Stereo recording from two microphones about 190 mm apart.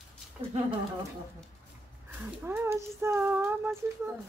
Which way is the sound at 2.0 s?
10° right (ahead or behind).